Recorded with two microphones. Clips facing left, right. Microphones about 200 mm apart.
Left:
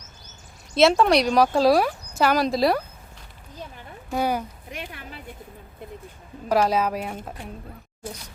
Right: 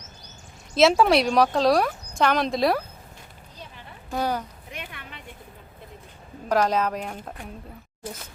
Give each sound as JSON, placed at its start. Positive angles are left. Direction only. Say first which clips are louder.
{"t": 0.7, "sound": "speech", "louder": "even", "side_deg": 0}
{"t": 4.1, "sound": "speech", "louder": "left 2 dB", "side_deg": 10}
{"t": 4.7, "sound": "a sound", "louder": "left 2 dB", "side_deg": 40}
{"t": 6.5, "sound": "speech", "louder": "left 1 dB", "side_deg": 10}